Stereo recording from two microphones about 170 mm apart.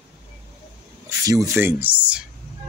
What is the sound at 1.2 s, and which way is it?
Speech, 20° right (ahead or behind).